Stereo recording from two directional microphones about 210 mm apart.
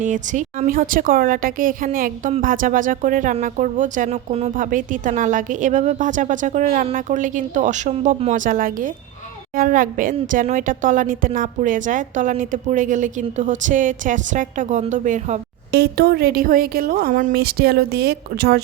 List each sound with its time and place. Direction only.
0.0 s a woman's voice: 35° right (ahead or behind)
15.7 s a woman's voice: 50° right (ahead or behind)